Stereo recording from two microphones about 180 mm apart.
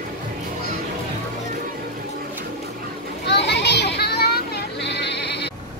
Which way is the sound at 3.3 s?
70° left (ahead or behind).